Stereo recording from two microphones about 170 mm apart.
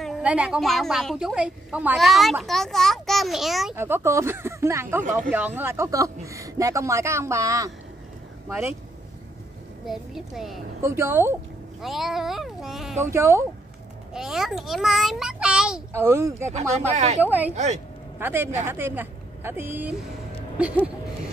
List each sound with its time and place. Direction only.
0.0 s a woman's voice: 5° right (ahead or behind)
3.7 s a man's voice: 15° right (ahead or behind)
9.8 s a woman's voice: centre (ahead or behind)
10.8 s a man's voice: 15° right (ahead or behind)
11.8 s a woman's voice: centre (ahead or behind)
13.0 s a man's voice: 15° right (ahead or behind)
14.1 s a child's voice: centre (ahead or behind)
15.9 s a man's voice: 15° right (ahead or behind)
16.9 s speech: 40° right (ahead or behind)
17.2 s a man's voice: 10° right (ahead or behind)
17.5 s speech: 40° right (ahead or behind)
18.2 s a man's voice: 15° right (ahead or behind)